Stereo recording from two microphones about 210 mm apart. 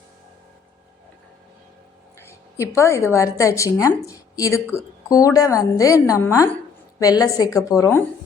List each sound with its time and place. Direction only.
2.6 s a woman's voice: 15° left (ahead or behind)